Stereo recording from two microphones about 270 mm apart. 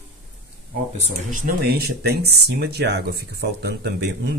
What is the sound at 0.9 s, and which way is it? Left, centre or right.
Speech, right.